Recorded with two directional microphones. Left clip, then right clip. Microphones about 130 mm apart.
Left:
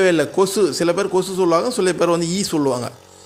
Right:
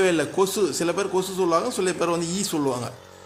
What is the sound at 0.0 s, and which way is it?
A man's voice, 25° left (ahead or behind).